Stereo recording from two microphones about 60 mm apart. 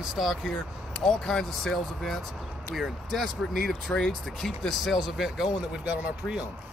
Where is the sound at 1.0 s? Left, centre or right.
Centre.